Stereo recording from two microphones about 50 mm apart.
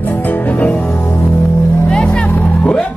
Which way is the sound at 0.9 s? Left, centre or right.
Left.